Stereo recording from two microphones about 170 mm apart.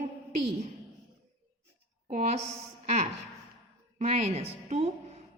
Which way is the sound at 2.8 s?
40° right (ahead or behind).